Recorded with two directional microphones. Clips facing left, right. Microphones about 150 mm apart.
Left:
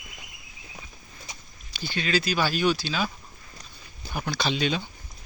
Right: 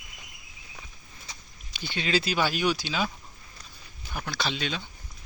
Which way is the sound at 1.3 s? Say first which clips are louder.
Left 2 dB; 15° left (ahead or behind).